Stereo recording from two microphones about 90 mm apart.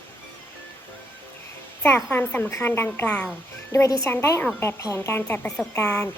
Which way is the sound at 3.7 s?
35° left (ahead or behind).